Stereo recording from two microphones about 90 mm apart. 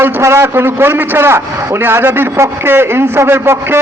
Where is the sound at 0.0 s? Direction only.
30° right (ahead or behind).